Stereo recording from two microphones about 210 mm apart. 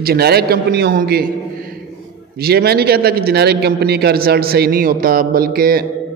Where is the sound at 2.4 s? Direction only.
50° right (ahead or behind).